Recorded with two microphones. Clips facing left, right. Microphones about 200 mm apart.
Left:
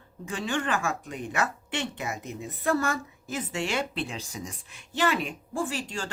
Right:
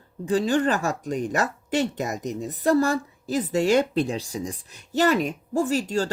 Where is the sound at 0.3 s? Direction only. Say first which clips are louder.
Right 8 dB; 35° right (ahead or behind).